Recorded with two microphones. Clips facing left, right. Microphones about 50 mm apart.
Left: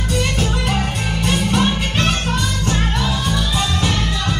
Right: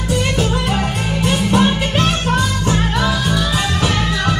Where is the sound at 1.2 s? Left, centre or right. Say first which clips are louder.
Right 3 dB; right.